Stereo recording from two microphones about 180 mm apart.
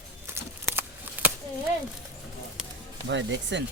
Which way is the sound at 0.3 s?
10° right (ahead or behind).